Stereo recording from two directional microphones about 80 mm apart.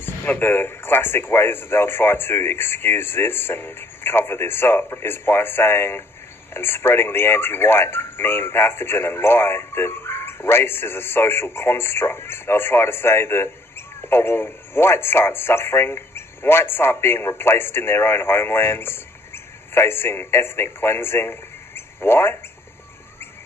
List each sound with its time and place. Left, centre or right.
0.0 s speech: left